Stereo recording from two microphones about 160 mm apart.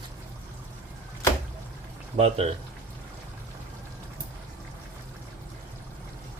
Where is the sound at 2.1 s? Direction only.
40° right (ahead or behind).